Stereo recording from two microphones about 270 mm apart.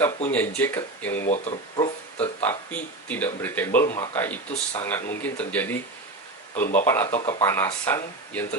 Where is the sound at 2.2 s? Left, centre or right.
Centre.